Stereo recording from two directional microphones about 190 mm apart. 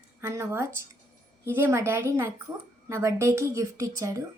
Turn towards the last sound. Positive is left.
turn(degrees=-15)  # may be behind; listen again after turning